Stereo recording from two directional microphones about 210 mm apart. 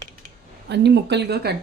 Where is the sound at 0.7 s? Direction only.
55° right (ahead or behind).